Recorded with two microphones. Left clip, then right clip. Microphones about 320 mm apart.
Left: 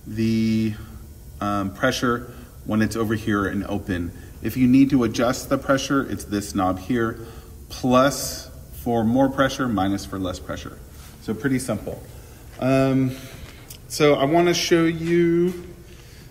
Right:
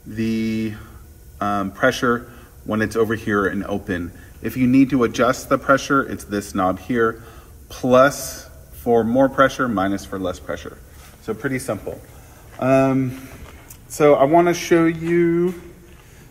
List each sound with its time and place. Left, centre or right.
0.1 s a sound: right
1.4 s a man's voice: right
11.4 s a man's voice: centre